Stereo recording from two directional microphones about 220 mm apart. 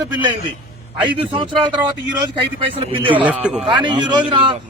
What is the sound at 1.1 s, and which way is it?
Speech, 20° right (ahead or behind).